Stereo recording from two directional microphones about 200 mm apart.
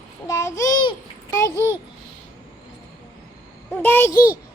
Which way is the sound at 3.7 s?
10° left (ahead or behind).